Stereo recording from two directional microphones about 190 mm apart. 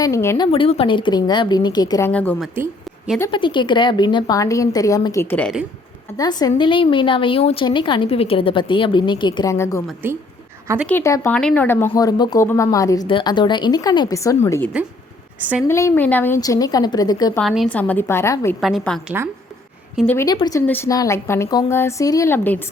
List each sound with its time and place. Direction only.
0.0 s a woman's voice: 15° left (ahead or behind)
0.4 s speech: 30° left (ahead or behind); by 2.4 s 10° left (ahead or behind)
3.3 s speech: 25° left (ahead or behind)
10.0 s a woman's voice: 10° right (ahead or behind)
10.8 s a woman's voice: 15° left (ahead or behind)
17.3 s a woman's voice: centre (ahead or behind)
18.6 s a woman's voice: centre (ahead or behind)
20.1 s a woman's voice: 15° left (ahead or behind)